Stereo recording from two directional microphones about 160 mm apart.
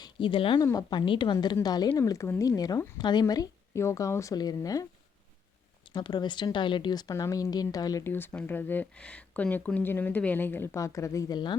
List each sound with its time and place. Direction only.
0.0 s a woman's voice: 30° left (ahead or behind)
5.9 s a woman's voice: 25° left (ahead or behind)